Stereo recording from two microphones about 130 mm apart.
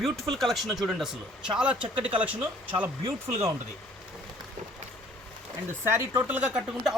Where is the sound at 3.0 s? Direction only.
45° right (ahead or behind).